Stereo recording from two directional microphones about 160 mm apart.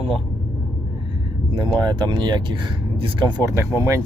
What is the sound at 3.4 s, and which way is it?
Speech, 20° right (ahead or behind).